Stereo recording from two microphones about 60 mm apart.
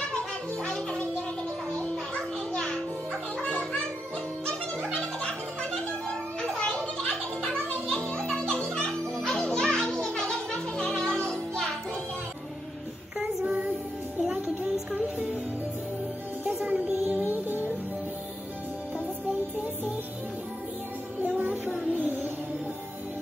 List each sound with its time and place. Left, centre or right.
0.7 s music: centre
2.5 s music: centre
4.9 s music: centre
6.5 s children playing: centre
7.0 s music: centre
14.2 s music: centre
16.6 s music: right
21.9 s music: right